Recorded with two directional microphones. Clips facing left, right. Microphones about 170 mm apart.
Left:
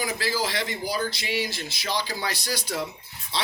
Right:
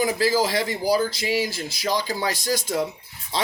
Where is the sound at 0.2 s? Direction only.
45° right (ahead or behind).